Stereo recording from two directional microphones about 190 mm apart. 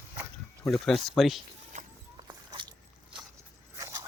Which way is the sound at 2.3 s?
20° right (ahead or behind).